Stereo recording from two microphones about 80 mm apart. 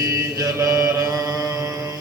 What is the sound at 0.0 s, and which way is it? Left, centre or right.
Mantra, right.